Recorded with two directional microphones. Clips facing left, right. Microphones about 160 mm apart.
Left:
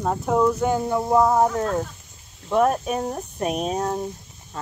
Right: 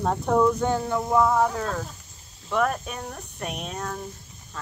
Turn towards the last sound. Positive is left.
turn(degrees=30)  # may be behind; listen again after turning